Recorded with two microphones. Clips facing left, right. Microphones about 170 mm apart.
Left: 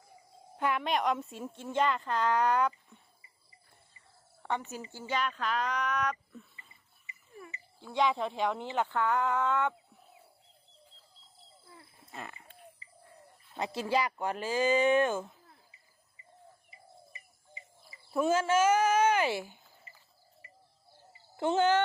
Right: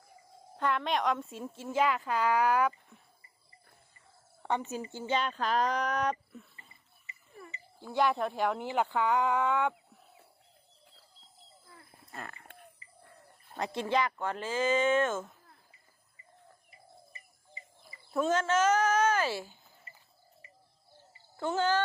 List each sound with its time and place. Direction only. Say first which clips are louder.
0.5 s a woman's voice: even; 10° left (ahead or behind); by 3.0 s 5° right (ahead or behind)
4.4 s speech: right 3 dB; 20° right (ahead or behind); by 6.1 s 35° right (ahead or behind)
7.9 s speech: right 1 dB; 5° right (ahead or behind)
13.5 s a sound: even; 45° right (ahead or behind)
14.0 s speech: even; 15° left (ahead or behind)
18.1 s speech: left 1 dB; 10° left (ahead or behind)
21.3 s a child's voice: left 3 dB; 20° left (ahead or behind)